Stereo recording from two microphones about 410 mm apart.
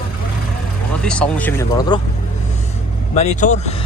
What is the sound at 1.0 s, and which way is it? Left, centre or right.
Speech, centre.